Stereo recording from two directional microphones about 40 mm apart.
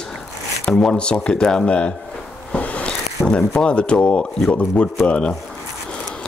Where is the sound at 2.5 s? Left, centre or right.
Left.